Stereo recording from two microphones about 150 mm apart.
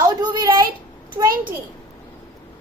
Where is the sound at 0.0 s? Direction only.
25° right (ahead or behind).